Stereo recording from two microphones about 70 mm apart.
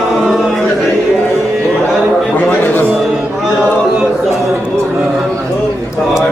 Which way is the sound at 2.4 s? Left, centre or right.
Left.